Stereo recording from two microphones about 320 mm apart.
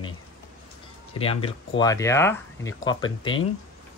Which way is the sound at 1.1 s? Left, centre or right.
Centre.